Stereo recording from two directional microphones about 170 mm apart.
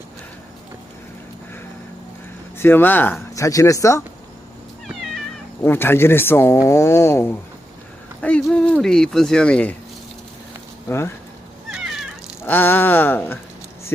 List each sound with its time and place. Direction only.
2.6 s speech: 10° left (ahead or behind)
4.9 s cat: centre (ahead or behind)
5.6 s speech: 15° left (ahead or behind)
10.8 s speech: 15° left (ahead or behind)
11.7 s cat: centre (ahead or behind)
12.5 s speech: 10° left (ahead or behind)